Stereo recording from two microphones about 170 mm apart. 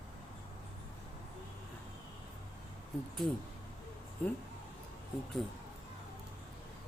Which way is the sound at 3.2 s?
5° left (ahead or behind).